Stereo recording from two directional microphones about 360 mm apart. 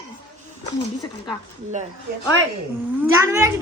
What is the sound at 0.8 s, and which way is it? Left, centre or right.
Speech, centre.